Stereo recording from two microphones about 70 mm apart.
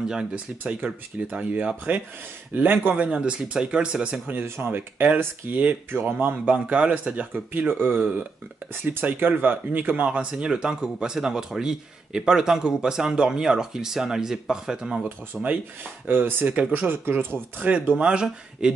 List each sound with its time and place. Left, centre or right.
0.1 s speech: centre
3.1 s speech: centre
4.3 s speech: right; by 15.0 s centre
15.3 s speech: centre
16.1 s speech: right; by 18.7 s centre